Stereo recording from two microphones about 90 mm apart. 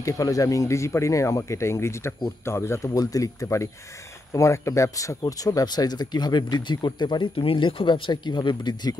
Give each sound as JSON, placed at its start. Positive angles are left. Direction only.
{"t": 0.0, "sound": "speech", "side_deg": 40}
{"t": 7.3, "sound": "speech", "side_deg": 80}